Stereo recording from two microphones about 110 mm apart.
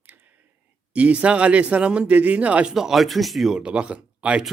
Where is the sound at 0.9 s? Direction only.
10° right (ahead or behind).